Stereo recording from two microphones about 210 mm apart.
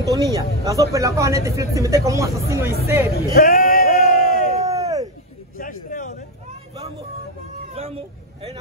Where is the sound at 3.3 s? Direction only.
40° left (ahead or behind).